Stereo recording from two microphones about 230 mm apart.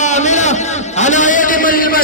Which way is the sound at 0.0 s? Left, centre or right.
Left.